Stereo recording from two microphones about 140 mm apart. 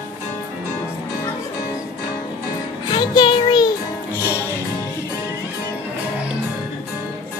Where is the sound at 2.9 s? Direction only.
30° left (ahead or behind).